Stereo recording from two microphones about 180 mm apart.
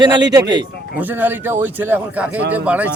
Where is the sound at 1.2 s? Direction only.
10° right (ahead or behind).